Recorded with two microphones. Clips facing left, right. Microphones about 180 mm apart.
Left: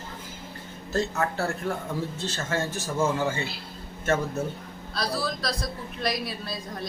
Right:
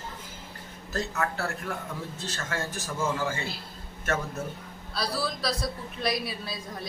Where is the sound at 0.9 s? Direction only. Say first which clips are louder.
Left 4 dB; 30° left (ahead or behind).